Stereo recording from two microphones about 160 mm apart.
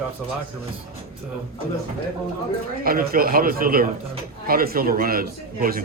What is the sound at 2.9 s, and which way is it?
A man's voice, 65° right (ahead or behind).